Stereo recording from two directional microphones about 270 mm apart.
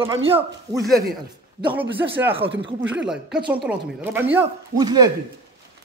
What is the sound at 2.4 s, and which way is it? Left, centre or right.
Speech, right.